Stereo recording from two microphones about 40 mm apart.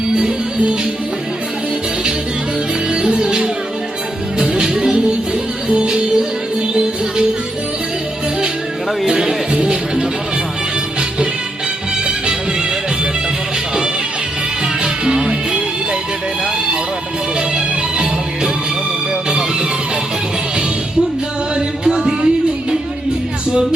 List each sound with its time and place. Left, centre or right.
2.9 s music: right
9.0 s music: centre
12.0 s music: right
14.8 s music: centre
19.3 s music: right
21.8 s a sound: centre